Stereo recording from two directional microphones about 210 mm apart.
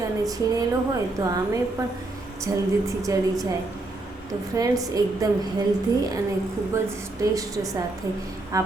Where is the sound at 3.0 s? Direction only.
15° right (ahead or behind).